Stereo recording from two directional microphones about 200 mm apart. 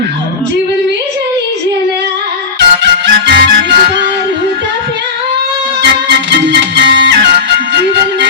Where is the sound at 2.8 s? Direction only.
60° right (ahead or behind).